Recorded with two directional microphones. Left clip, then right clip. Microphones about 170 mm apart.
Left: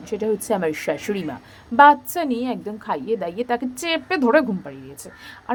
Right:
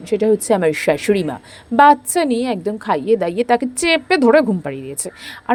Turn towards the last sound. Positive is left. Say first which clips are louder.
# right 9 dB
turn(degrees=-40)  # may be behind; listen again after turning